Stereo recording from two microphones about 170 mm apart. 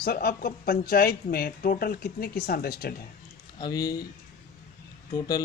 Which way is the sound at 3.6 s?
20° left (ahead or behind).